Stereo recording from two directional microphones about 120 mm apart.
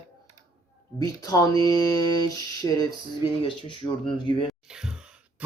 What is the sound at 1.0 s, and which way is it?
Speech, 30° left (ahead or behind).